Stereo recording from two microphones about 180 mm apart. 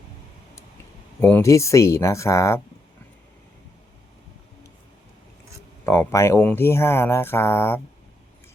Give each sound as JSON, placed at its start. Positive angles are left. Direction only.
{"t": 1.2, "sound": "speech", "side_deg": 15}
{"t": 5.8, "sound": "speech", "side_deg": 15}